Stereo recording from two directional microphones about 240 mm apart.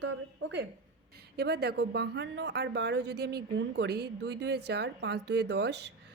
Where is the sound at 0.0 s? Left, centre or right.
Right.